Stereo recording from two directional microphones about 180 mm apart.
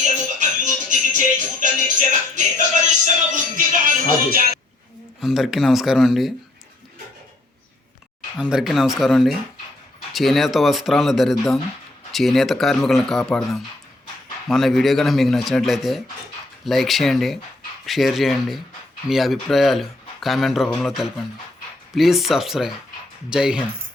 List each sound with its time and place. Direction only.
0.0 s music: 45° right (ahead or behind)
5.2 s speech: centre (ahead or behind)
8.4 s speech: 5° right (ahead or behind)